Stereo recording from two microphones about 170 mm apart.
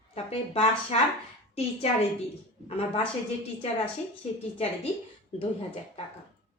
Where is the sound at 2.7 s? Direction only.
35° left (ahead or behind).